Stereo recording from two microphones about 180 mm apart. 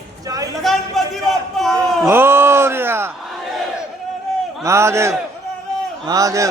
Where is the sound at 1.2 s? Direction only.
Centre (ahead or behind).